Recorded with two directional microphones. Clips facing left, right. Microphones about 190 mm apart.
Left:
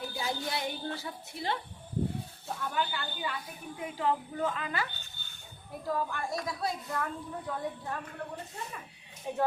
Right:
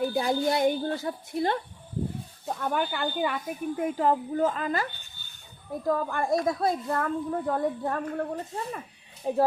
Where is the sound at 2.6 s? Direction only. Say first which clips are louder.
Right 6 dB; 55° right (ahead or behind); by 4.8 s 40° right (ahead or behind).